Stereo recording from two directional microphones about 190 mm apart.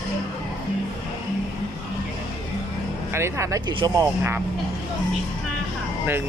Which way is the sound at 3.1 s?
15° right (ahead or behind).